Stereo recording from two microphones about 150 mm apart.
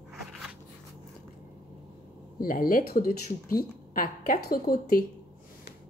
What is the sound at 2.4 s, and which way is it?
Speech, 70° left (ahead or behind).